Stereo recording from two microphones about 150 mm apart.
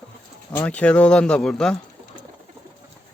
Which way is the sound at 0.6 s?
10° left (ahead or behind).